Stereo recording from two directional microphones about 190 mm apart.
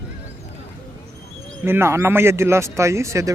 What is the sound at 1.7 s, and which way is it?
Speech, 15° right (ahead or behind).